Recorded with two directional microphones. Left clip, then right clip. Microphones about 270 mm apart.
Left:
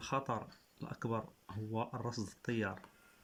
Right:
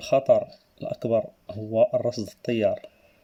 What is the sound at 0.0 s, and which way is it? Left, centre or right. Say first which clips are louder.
Speech: right 19 dB; centre.